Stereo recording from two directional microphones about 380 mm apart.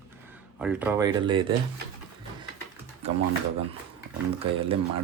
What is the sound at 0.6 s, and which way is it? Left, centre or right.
Speech, centre.